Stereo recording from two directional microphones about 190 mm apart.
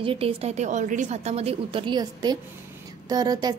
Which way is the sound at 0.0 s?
30° right (ahead or behind).